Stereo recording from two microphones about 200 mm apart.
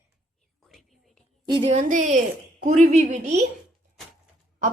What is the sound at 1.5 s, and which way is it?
Speech, 25° right (ahead or behind).